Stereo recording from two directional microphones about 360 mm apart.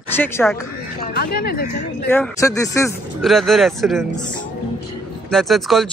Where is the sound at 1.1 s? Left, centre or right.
Left.